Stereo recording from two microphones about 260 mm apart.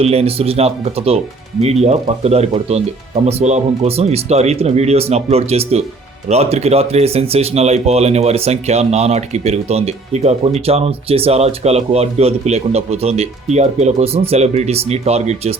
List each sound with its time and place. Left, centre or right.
0.0 s speech: right